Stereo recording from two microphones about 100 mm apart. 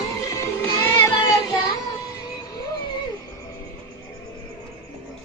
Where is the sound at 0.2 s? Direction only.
35° left (ahead or behind).